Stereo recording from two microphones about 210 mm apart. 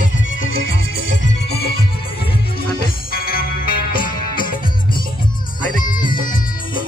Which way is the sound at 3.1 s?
45° left (ahead or behind).